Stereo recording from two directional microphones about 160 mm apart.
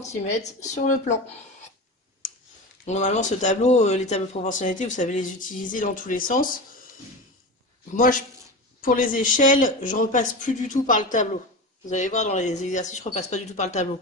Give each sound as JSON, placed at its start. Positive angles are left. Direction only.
{"t": 0.4, "sound": "speech", "side_deg": 50}
{"t": 2.8, "sound": "speech", "side_deg": 45}
{"t": 7.9, "sound": "speech", "side_deg": 55}